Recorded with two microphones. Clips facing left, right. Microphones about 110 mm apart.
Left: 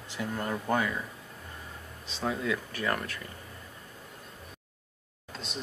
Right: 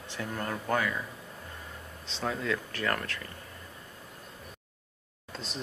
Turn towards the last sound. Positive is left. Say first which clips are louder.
# even
turn(degrees=0)  # may be behind; listen again after turning